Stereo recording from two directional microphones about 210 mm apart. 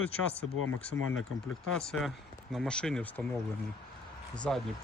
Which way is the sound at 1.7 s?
5° left (ahead or behind).